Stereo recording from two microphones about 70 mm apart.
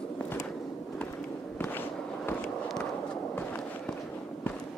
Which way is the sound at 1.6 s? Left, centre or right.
Left.